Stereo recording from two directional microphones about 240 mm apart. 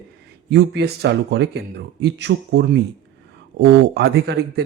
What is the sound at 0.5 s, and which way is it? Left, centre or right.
Speech, right.